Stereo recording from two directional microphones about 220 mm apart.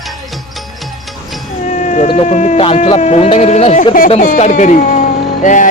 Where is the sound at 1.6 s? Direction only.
35° left (ahead or behind).